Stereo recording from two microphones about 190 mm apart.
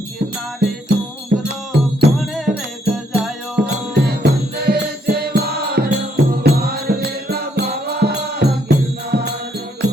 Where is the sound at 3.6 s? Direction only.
65° right (ahead or behind).